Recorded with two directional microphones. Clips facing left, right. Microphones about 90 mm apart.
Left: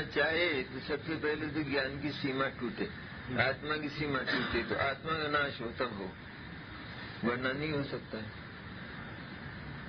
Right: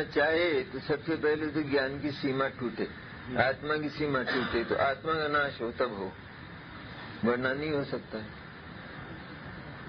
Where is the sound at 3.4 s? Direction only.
30° right (ahead or behind).